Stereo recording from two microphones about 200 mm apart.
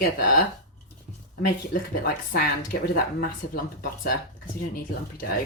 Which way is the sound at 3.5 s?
45° left (ahead or behind).